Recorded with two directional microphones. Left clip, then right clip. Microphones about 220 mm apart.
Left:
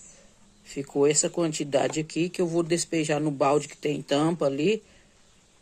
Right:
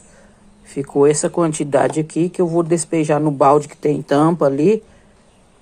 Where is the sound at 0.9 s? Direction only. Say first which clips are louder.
Right 9 dB; 5° left (ahead or behind).